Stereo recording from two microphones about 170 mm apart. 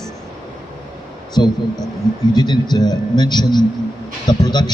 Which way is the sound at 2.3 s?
25° left (ahead or behind).